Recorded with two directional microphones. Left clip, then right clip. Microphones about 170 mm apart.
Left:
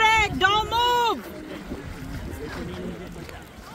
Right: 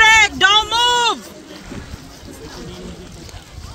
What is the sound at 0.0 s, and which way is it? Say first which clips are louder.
Vehicle: right 9 dB; centre (ahead or behind).